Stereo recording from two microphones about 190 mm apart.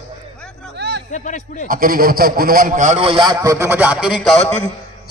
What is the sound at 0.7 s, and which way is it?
Music, 65° right (ahead or behind).